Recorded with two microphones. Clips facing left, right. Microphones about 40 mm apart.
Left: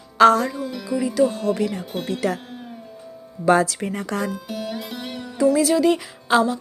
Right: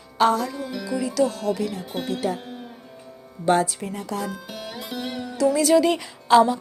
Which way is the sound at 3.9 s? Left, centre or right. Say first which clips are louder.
Left 3 dB; left.